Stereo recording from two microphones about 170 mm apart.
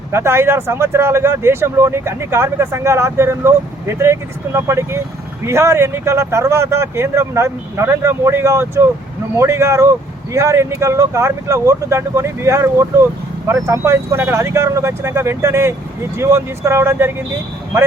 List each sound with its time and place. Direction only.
0.1 s speech: 15° right (ahead or behind)